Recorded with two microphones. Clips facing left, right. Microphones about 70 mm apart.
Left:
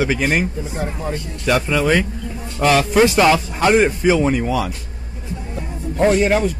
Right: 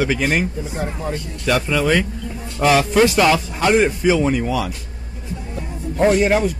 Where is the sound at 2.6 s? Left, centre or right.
Centre.